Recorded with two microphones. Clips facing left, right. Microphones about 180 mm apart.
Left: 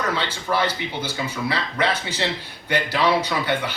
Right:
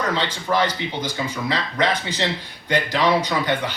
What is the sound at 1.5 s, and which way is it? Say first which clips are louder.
Speech: right 3 dB; 15° right (ahead or behind).